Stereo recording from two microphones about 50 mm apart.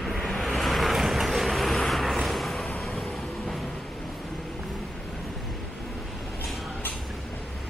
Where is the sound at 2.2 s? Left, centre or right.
Centre.